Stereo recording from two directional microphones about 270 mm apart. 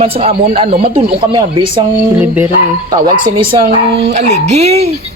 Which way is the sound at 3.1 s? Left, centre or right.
Centre.